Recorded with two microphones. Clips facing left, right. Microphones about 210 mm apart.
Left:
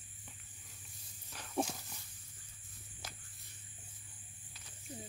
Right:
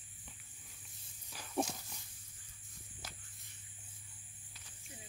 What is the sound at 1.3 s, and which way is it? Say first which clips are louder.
Wild animals: even; centre (ahead or behind).